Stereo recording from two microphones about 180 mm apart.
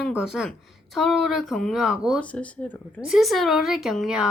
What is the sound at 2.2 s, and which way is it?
Speech, 5° left (ahead or behind).